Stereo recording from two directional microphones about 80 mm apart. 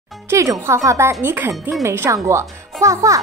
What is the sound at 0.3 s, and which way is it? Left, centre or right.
Speech, right.